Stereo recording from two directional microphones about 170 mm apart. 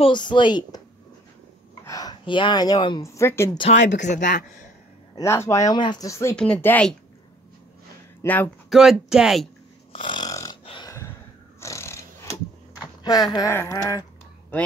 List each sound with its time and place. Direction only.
0.0 s speech: 25° left (ahead or behind)
1.9 s speech: 20° left (ahead or behind)
3.5 s speech: 40° left (ahead or behind)
5.1 s speech: 15° left (ahead or behind)
6.3 s speech: 5° left (ahead or behind)
8.2 s speech: 10° left (ahead or behind)
8.6 s speech: centre (ahead or behind)
9.9 s snoring: 30° left (ahead or behind)
10.6 s burping: 30° left (ahead or behind)
11.6 s a sound: 15° left (ahead or behind)
13.3 s speech: 20° left (ahead or behind)